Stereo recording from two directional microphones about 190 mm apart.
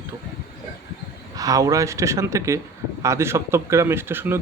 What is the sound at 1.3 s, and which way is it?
Speech, 20° right (ahead or behind).